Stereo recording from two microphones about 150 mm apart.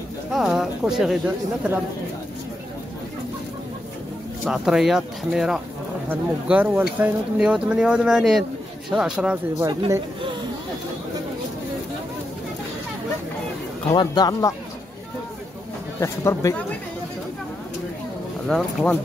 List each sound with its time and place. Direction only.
0.3 s speech: centre (ahead or behind)
4.5 s speech: 5° right (ahead or behind)
9.6 s speech: 20° right (ahead or behind)
13.9 s speech: 25° left (ahead or behind)
16.0 s speech: 20° left (ahead or behind)
18.5 s speech: 5° left (ahead or behind)